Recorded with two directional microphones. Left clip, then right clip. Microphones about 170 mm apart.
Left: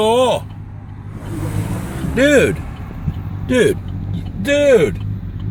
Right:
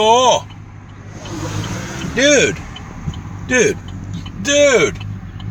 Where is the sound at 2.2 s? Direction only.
30° left (ahead or behind).